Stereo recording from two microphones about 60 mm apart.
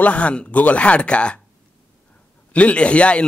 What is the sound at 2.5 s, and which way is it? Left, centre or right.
Speech, left.